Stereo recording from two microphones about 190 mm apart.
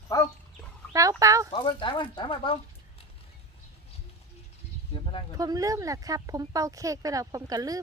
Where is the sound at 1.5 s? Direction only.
25° left (ahead or behind).